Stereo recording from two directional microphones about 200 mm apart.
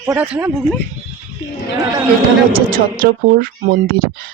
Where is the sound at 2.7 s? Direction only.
45° right (ahead or behind).